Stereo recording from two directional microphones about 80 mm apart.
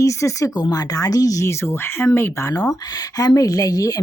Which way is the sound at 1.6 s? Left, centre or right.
Left.